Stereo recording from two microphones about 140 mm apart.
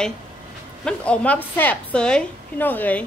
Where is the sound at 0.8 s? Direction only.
10° left (ahead or behind).